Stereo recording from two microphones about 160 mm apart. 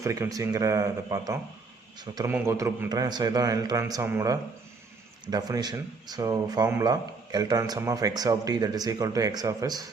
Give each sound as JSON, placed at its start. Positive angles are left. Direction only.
{"t": 0.0, "sound": "a man's voice", "side_deg": -20}
{"t": 2.9, "sound": "speech", "side_deg": -25}